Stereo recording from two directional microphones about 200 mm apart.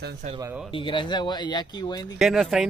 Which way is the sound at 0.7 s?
25° left (ahead or behind).